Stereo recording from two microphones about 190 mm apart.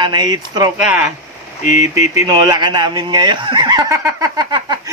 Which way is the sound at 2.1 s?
20° right (ahead or behind).